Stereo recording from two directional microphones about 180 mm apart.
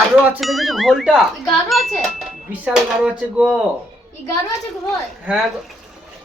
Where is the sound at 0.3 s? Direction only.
Centre (ahead or behind).